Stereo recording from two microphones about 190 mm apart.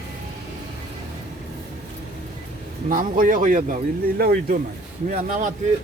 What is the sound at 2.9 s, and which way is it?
Speech, 45° right (ahead or behind).